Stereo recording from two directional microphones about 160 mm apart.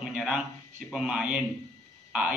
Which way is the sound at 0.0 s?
5° right (ahead or behind).